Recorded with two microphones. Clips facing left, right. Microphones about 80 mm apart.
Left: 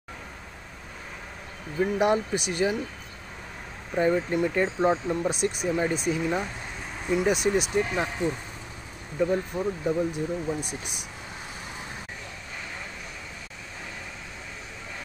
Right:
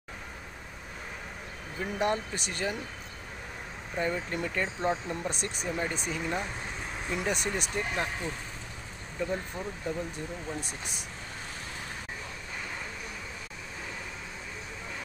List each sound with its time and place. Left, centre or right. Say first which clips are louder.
1.8 s speech: left 7 dB; centre
3.9 s speech: left 8 dB; left
5.3 s speech: left 8 dB; centre
10.6 s speech: left 4 dB; right